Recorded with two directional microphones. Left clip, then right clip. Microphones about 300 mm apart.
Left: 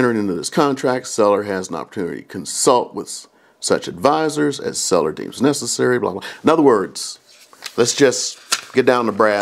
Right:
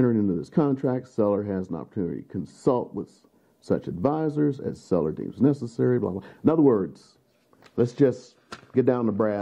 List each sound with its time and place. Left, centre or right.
0.0 s speech: centre
2.8 s speech: left
3.6 s speech: centre